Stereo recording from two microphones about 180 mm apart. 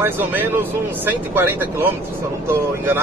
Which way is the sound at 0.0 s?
10° right (ahead or behind).